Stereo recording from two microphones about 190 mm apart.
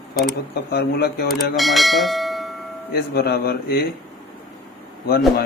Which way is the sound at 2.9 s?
55° left (ahead or behind).